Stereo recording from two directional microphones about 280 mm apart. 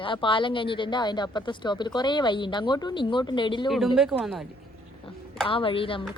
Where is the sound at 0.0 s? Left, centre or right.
Centre.